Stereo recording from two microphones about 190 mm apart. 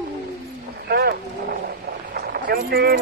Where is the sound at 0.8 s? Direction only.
55° right (ahead or behind).